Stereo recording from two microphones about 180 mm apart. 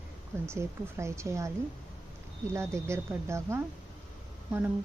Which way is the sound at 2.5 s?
15° right (ahead or behind).